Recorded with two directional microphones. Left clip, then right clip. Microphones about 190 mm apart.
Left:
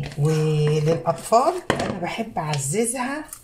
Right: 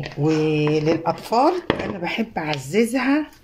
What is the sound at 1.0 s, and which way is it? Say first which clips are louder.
Speech: left 3 dB; 55° right (ahead or behind).